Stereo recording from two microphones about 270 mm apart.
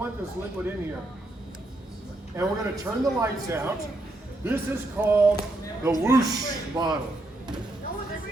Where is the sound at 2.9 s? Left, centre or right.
Centre.